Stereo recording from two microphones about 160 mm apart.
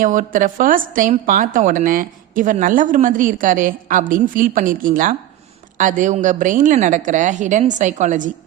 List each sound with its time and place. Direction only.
0.0 s a woman's voice: 55° right (ahead or behind)